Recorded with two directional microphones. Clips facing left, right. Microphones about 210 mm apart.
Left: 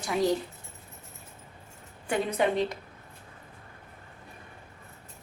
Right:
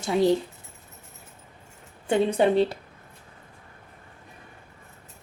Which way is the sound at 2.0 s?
25° right (ahead or behind).